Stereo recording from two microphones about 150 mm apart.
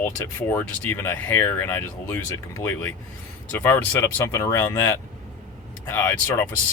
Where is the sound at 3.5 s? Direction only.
10° left (ahead or behind).